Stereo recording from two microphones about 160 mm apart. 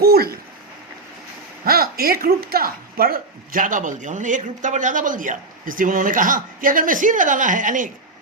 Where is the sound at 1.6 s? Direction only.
70° right (ahead or behind).